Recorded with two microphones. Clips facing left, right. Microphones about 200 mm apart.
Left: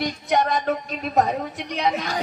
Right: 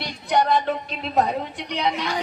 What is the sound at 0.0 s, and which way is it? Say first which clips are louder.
A woman's voice: even; 45° left (ahead or behind).